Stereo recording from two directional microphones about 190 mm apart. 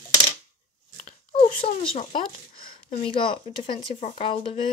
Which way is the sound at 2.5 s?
50° left (ahead or behind).